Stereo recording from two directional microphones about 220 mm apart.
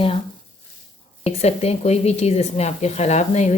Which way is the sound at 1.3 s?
30° left (ahead or behind).